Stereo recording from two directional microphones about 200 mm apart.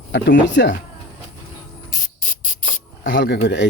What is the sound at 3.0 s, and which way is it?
Speech, 65° left (ahead or behind).